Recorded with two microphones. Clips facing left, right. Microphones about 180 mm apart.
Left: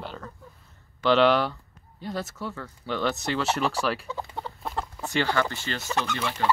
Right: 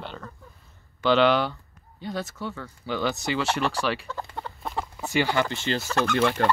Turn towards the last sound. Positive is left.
turn(degrees=-55)  # may be behind; listen again after turning